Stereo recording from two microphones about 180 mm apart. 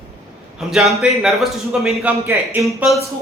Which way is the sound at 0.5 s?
Centre (ahead or behind).